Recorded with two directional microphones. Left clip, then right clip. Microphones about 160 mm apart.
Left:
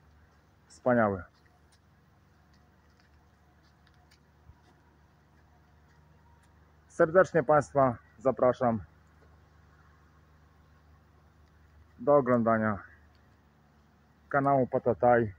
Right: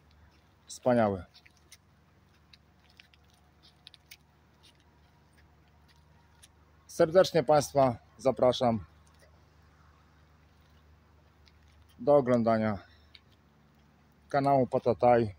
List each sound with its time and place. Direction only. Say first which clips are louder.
0.7 s speech: even; 25° right (ahead or behind)
6.9 s speech: even; 25° right (ahead or behind)
12.0 s speech: even; 20° right (ahead or behind)
14.3 s speech: even; 25° right (ahead or behind)